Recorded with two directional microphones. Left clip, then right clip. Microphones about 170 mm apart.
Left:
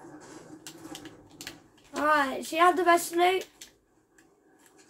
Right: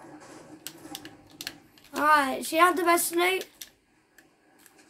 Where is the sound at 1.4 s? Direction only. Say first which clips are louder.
Right 4 dB; 20° right (ahead or behind).